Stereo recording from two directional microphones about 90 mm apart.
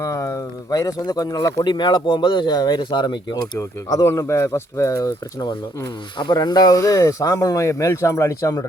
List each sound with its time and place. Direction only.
0.0 s speech: 35° left (ahead or behind)
1.6 s speech: 55° left (ahead or behind)
3.8 s speech: 35° left (ahead or behind)
6.1 s speech: 55° left (ahead or behind); by 8.6 s 40° left (ahead or behind)